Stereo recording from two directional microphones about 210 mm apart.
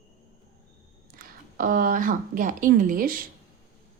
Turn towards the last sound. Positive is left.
turn(degrees=-40)  # may be behind; listen again after turning